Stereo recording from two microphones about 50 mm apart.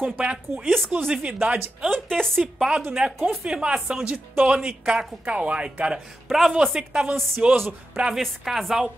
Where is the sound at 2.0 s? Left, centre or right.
Centre.